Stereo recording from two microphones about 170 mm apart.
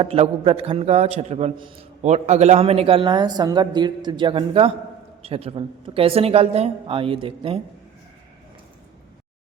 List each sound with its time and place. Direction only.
0.0 s a man's voice: 35° right (ahead or behind)